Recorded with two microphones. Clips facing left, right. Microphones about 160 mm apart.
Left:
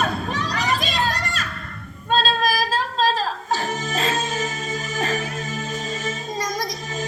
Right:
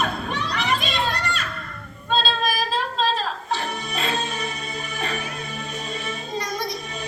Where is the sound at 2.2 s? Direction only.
40° left (ahead or behind).